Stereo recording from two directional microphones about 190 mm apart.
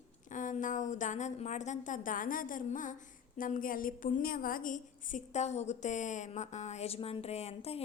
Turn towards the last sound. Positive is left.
turn(degrees=35)  # may be behind; listen again after turning